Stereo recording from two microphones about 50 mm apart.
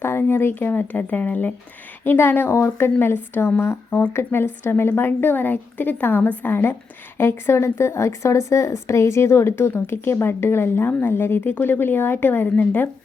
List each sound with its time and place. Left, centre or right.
0.0 s speech: left
0.7 s speech: left
2.0 s a woman's voice: left